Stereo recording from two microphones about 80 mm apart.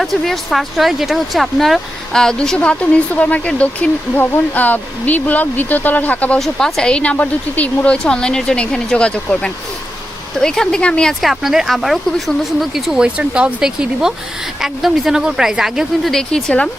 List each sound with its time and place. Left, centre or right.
0.0 s speech: centre
6.4 s speech: centre
11.2 s speech: centre